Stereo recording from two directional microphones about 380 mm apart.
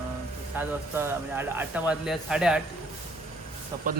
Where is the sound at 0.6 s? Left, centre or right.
Centre.